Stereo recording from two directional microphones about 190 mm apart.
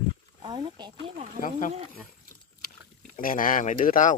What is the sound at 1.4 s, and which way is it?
Speech, 40° left (ahead or behind).